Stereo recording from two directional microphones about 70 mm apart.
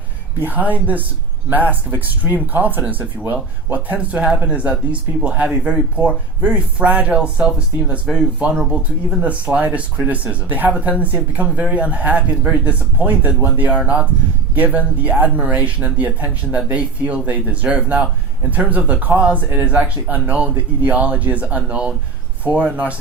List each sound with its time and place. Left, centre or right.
0.4 s speech: right